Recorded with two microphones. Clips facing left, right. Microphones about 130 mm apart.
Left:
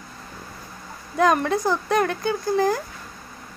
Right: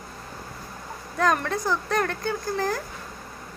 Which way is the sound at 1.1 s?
15° left (ahead or behind).